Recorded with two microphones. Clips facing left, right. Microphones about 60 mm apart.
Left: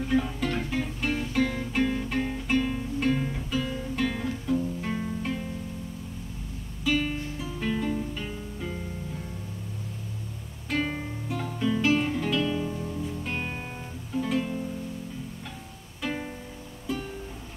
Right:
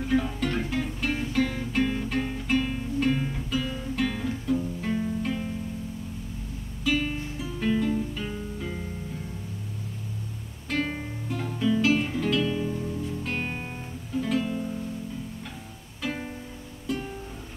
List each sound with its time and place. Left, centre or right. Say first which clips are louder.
0.0 s music: even; centre
6.8 s music: even; centre
10.7 s music: even; centre
13.4 s music: right 2 dB; centre
14.1 s music: right 1 dB; centre
16.0 s music: even; centre